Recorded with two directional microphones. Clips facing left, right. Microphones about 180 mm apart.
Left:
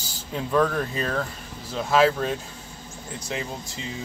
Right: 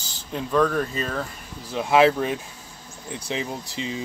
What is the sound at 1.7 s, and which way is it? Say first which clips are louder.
Speech: right 2 dB; 15° right (ahead or behind).